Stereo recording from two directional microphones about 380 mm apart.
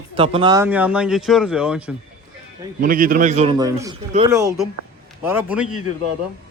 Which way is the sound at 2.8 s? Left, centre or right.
Right.